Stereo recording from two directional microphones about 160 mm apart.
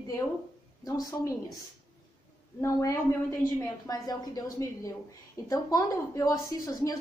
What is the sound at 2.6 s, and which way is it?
A woman's voice, 20° left (ahead or behind).